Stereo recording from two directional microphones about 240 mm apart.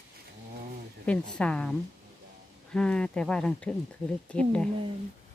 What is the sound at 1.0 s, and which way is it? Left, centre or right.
Speech, centre.